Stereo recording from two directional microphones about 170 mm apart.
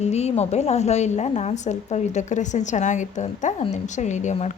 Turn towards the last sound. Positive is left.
turn(degrees=45)  # may be behind; listen again after turning